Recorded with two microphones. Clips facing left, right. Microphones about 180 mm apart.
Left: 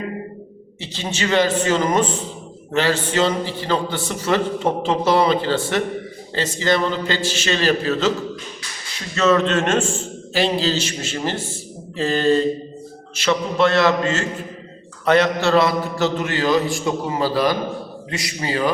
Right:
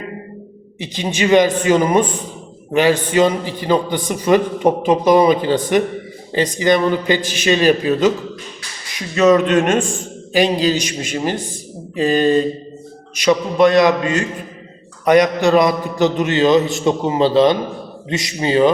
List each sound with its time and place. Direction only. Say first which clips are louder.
0.8 s a man's voice: right 6 dB; 15° right (ahead or behind)